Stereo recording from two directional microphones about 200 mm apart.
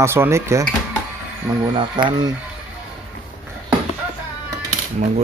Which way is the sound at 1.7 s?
25° right (ahead or behind).